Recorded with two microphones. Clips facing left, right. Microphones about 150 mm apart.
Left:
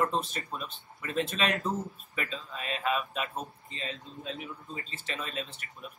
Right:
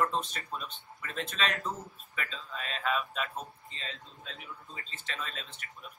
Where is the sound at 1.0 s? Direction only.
10° left (ahead or behind).